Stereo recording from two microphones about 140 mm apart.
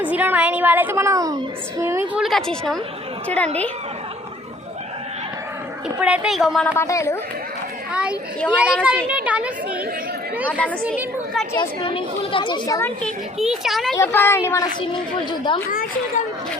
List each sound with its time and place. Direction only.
0.0 s a woman's voice: 10° right (ahead or behind)
2.1 s a woman's voice: centre (ahead or behind)
6.0 s a woman's voice: 5° right (ahead or behind)
6.7 s speech: 20° left (ahead or behind)
7.9 s a woman's voice: 10° right (ahead or behind)
11.5 s a woman's voice: 35° left (ahead or behind)
13.0 s a woman's voice: 5° left (ahead or behind)
13.9 s a woman's voice: 15° left (ahead or behind)
14.8 s a woman's voice: 35° left (ahead or behind)
15.6 s speech: 90° left